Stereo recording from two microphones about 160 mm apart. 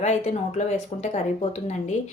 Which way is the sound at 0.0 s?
45° left (ahead or behind).